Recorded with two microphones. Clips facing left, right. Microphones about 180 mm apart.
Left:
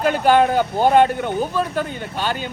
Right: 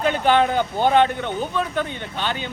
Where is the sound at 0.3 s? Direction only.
10° left (ahead or behind).